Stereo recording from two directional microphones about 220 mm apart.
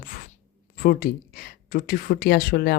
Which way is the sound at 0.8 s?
40° left (ahead or behind).